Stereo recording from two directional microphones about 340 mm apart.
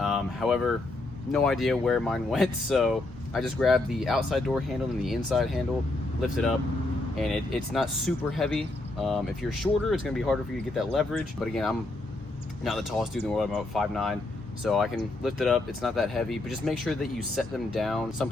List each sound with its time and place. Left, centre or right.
0.0 s a sound: centre
1.3 s speech: centre
7.2 s speech: centre